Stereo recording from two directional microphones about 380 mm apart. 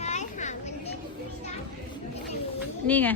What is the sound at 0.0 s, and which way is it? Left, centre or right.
Children playing, centre.